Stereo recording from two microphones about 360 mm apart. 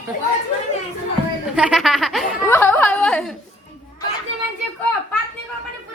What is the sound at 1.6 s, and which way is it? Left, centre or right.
A woman's voice, centre.